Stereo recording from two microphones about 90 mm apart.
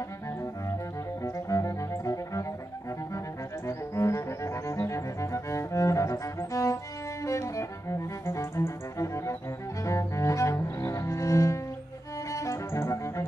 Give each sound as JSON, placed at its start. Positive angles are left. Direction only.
{"t": 1.2, "sound": "cello", "side_deg": 35}
{"t": 3.6, "sound": "cello", "side_deg": 35}
{"t": 7.2, "sound": "music", "side_deg": 35}
{"t": 9.8, "sound": "cello", "side_deg": 35}
{"t": 12.3, "sound": "music", "side_deg": 35}